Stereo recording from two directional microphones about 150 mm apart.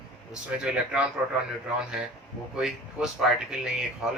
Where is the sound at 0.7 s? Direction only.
5° right (ahead or behind).